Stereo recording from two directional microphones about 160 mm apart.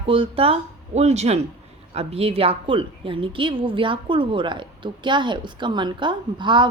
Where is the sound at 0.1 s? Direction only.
35° right (ahead or behind).